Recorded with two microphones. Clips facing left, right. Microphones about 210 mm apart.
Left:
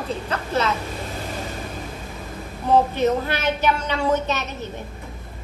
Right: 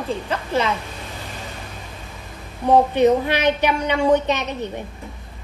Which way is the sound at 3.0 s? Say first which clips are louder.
Right 5 dB; 15° right (ahead or behind).